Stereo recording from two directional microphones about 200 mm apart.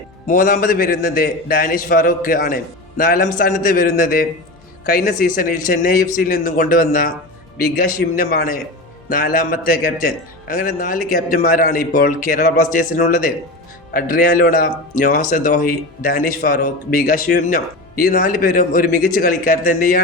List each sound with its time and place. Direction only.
0.3 s a man's voice: 45° left (ahead or behind)